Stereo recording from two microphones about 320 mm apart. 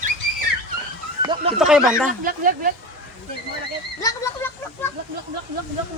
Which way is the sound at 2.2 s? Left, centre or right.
Right.